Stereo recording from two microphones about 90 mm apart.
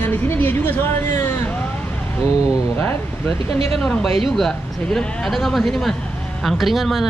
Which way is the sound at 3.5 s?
90° right.